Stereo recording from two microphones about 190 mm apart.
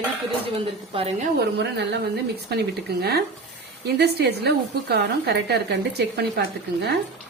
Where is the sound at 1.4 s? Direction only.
65° right (ahead or behind).